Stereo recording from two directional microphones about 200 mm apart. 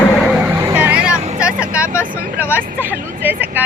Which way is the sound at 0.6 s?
5° right (ahead or behind).